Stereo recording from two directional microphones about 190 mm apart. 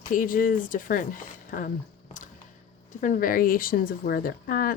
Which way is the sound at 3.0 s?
45° left (ahead or behind).